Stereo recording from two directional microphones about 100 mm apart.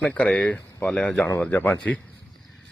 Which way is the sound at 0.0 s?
10° left (ahead or behind).